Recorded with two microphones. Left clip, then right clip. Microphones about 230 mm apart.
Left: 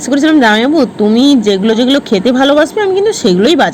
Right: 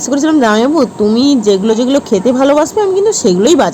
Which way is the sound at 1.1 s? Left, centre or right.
Right.